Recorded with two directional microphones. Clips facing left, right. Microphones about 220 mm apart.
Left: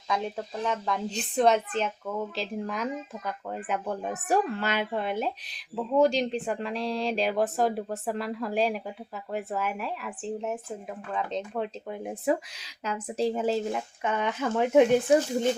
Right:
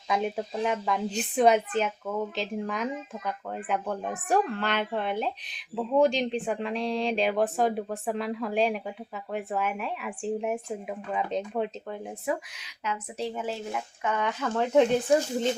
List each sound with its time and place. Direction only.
0.1 s speech: 15° right (ahead or behind)
12.8 s speech: 35° left (ahead or behind)
14.0 s speech: 20° left (ahead or behind)